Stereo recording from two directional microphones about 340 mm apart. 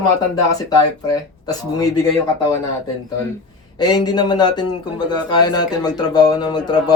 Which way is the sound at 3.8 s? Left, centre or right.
Centre.